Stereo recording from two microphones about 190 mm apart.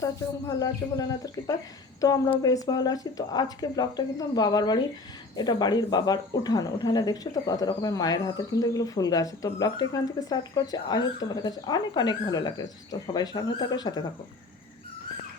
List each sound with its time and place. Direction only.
0.0 s speech: 20° left (ahead or behind)